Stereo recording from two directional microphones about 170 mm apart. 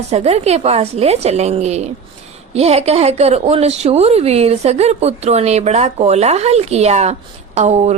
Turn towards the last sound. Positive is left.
turn(degrees=-40)  # may be behind; listen again after turning